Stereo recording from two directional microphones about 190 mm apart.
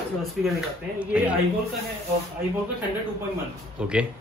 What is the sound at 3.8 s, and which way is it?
Speech, 5° right (ahead or behind).